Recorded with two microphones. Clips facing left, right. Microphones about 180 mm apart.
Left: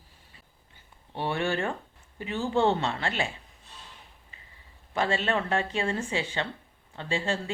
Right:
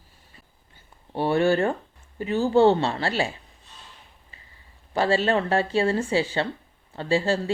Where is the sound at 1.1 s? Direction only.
40° right (ahead or behind).